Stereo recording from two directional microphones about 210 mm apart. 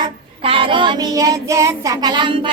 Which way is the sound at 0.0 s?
25° right (ahead or behind).